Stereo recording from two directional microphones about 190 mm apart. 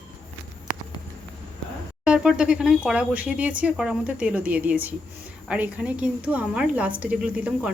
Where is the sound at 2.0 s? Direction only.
5° right (ahead or behind).